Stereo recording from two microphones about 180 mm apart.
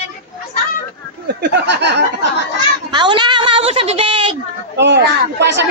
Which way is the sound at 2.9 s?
25° right (ahead or behind).